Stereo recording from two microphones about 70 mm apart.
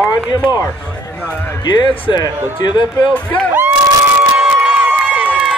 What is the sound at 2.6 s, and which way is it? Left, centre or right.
Speech, left.